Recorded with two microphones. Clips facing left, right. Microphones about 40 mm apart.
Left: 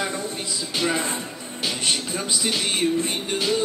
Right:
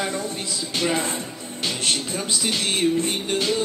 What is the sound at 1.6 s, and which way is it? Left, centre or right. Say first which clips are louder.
Music: even; centre.